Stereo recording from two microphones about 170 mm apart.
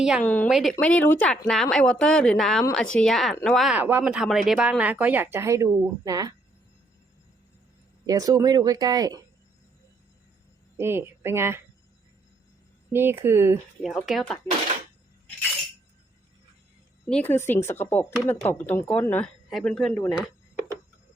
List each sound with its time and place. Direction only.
0.3 s speech: 10° left (ahead or behind); by 6.3 s 20° right (ahead or behind)
8.0 s speech: 20° right (ahead or behind)
10.8 s a woman's voice: 15° right (ahead or behind)
12.9 s speech: 15° right (ahead or behind)
13.8 s speech: centre (ahead or behind)
17.1 s speech: 10° left (ahead or behind)